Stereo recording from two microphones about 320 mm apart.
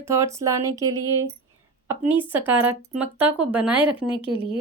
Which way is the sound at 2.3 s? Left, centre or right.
Centre.